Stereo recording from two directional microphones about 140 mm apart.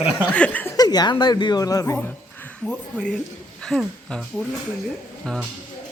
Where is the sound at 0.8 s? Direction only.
30° left (ahead or behind).